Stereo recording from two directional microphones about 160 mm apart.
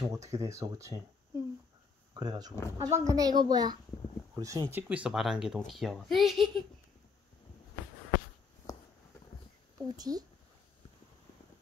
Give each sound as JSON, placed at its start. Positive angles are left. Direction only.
{"t": 0.0, "sound": "a child's voice", "side_deg": -20}
{"t": 8.7, "sound": "a sound", "side_deg": 20}
{"t": 9.9, "sound": "speech", "side_deg": -25}